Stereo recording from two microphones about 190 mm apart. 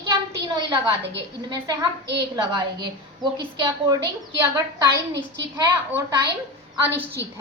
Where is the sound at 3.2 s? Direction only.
25° right (ahead or behind).